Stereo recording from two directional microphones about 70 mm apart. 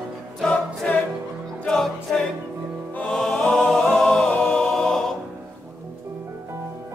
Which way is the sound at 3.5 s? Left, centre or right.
Centre.